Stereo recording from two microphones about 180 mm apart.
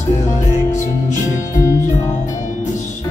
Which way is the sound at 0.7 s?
45° left (ahead or behind).